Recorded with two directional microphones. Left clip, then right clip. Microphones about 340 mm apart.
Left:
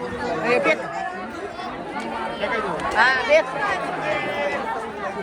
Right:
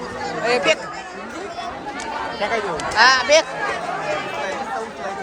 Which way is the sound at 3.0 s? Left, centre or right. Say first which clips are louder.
Right 3 dB; centre.